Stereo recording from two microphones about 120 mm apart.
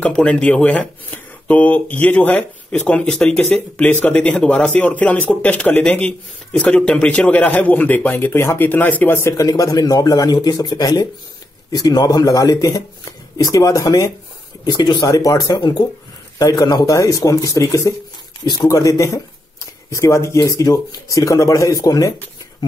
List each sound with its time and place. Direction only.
0.0 s speech: 10° left (ahead or behind); by 22.1 s 30° left (ahead or behind)